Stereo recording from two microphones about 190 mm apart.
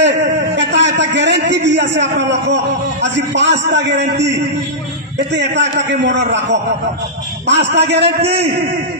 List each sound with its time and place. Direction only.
0.0 s a sound: 65° right (ahead or behind)
0.6 s a man's voice: 70° right (ahead or behind)
5.3 s a man's voice: 65° right (ahead or behind)
7.4 s a man's voice: 65° right (ahead or behind)